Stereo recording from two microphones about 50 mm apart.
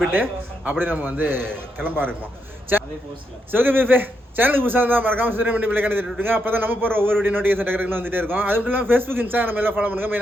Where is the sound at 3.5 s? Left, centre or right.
Right.